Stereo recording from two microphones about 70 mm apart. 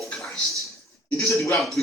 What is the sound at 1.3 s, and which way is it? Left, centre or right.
Speech, left.